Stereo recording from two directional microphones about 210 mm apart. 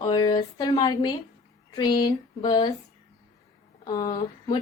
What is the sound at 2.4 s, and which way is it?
Speech, 20° left (ahead or behind).